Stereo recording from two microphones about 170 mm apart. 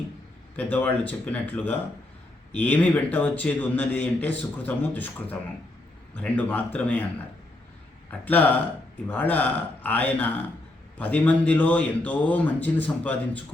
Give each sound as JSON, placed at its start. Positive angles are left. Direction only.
{"t": 0.5, "sound": "a man's voice", "side_deg": 10}
{"t": 8.2, "sound": "a man's voice", "side_deg": 10}